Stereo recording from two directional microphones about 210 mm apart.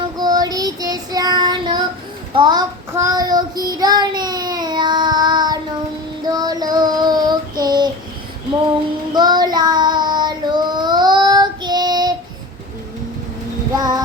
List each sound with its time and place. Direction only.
0.2 s child singing: 20° right (ahead or behind)
9.1 s child singing: 20° right (ahead or behind)
13.7 s music: 20° right (ahead or behind)